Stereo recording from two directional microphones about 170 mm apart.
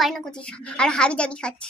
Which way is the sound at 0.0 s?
5° left (ahead or behind).